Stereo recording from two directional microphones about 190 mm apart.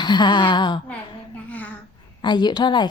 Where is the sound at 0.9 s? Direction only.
10° left (ahead or behind).